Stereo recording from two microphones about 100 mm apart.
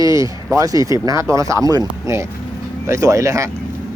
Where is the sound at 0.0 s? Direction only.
35° right (ahead or behind).